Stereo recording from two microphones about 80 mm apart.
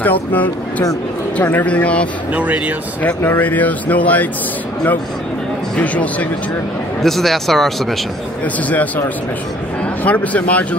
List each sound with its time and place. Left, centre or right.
0.0 s speech: left
2.3 s speech: centre
3.0 s speech: left
5.8 s speech: centre
7.0 s speech: centre
8.6 s speech: centre
10.0 s speech: centre